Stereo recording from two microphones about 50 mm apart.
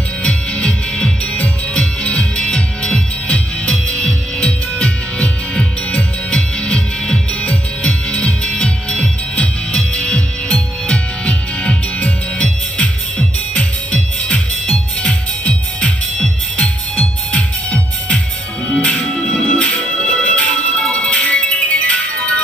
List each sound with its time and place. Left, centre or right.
0.2 s music: left